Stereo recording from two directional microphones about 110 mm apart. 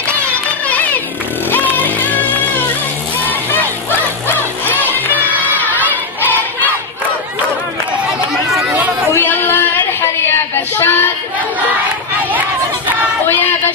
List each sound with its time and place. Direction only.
1.5 s music: 15° left (ahead or behind)
4.3 s music: 15° left (ahead or behind)
9.1 s a sound: 20° left (ahead or behind)
10.8 s child singing: 20° left (ahead or behind)